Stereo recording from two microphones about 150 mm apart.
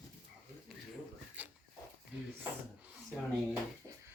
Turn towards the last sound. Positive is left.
turn(degrees=-20)  # may be behind; listen again after turning